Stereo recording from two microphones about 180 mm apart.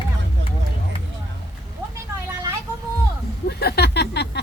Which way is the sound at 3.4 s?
65° left (ahead or behind).